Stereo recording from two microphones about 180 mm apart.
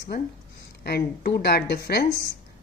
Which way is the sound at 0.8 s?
60° left (ahead or behind).